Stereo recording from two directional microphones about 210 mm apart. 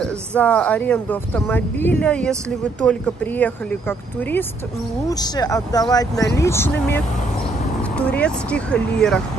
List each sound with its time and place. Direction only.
0.0 s speech: 5° left (ahead or behind)
8.0 s speech: 5° left (ahead or behind)